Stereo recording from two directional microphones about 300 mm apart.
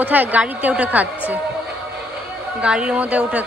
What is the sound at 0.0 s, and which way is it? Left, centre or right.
A woman's voice, centre.